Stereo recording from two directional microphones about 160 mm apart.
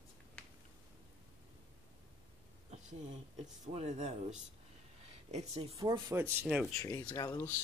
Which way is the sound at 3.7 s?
45° right (ahead or behind).